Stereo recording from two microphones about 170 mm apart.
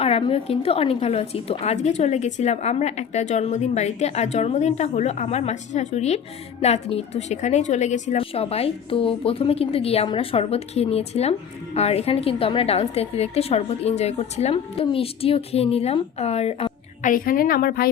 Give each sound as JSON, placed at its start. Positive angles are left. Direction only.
{"t": 0.0, "sound": "a woman's voice", "side_deg": 35}
{"t": 17.1, "sound": "a woman's voice", "side_deg": 55}